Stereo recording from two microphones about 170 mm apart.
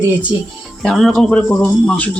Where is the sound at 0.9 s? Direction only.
Centre (ahead or behind).